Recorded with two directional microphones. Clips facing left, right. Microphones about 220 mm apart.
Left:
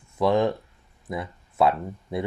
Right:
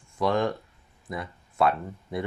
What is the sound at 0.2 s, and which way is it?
Speech, 25° left (ahead or behind).